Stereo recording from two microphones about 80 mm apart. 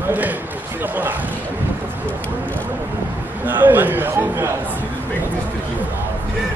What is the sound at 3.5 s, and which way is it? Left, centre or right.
A man's voice, right.